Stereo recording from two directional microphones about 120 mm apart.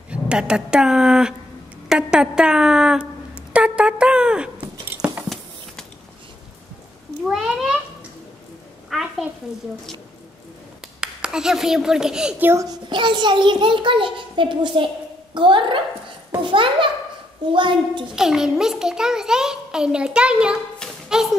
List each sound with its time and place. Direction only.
0.1 s a woman's voice: 10° right (ahead or behind)
5.0 s a sound: 10° right (ahead or behind)
7.2 s a child's voice: centre (ahead or behind)
8.9 s a sound: centre (ahead or behind)
11.0 s speech: 10° right (ahead or behind)
12.4 s a child's voice: 25° right (ahead or behind)
12.9 s a child's voice: 40° right (ahead or behind)
18.1 s a child's voice: 5° right (ahead or behind)
21.1 s music: 5° right (ahead or behind)